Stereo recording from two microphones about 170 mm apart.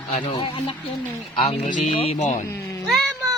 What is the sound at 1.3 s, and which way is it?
A woman's voice, 40° left (ahead or behind).